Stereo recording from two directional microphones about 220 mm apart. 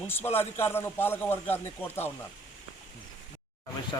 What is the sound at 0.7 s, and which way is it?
A man's voice, 10° left (ahead or behind).